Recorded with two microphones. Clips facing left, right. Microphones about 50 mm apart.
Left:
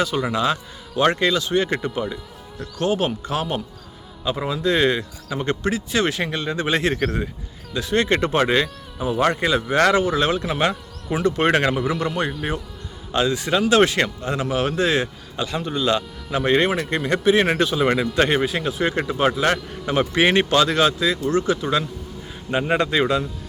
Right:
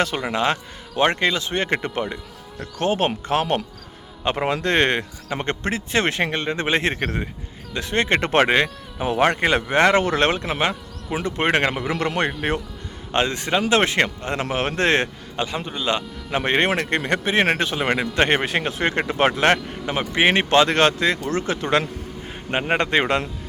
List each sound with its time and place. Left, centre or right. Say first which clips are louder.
0.3 s a man's voice: even; right
4.4 s speech: left 1 dB; right
7.7 s speech: left 1 dB; right
8.3 s speech: right 2 dB; right
11.9 s speech: right 1 dB; right
13.1 s speech: left 1 dB; right
15.4 s a man's voice: left 2 dB; right
16.6 s speech: right 1 dB; right
18.3 s speech: even; right
19.8 s a man's voice: left 5 dB; centre
20.5 s speech: right 2 dB; right
20.7 s speech: right 1 dB; right